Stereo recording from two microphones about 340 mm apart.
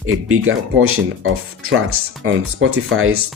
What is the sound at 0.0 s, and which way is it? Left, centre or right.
Speech, right.